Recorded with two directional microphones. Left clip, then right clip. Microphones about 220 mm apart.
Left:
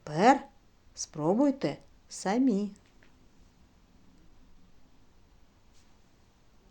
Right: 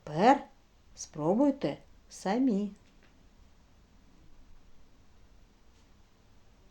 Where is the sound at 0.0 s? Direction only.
25° left (ahead or behind).